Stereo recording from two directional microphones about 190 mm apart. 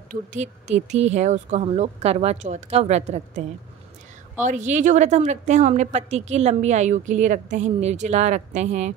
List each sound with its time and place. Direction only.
0.1 s a woman's voice: 40° right (ahead or behind)